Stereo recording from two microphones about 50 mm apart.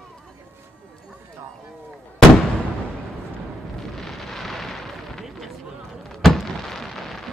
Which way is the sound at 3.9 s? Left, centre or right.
Centre.